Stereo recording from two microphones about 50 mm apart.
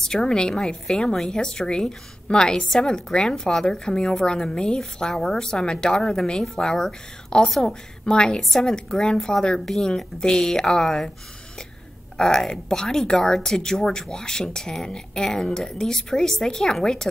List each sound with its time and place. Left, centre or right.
0.0 s speech: centre
12.2 s speech: centre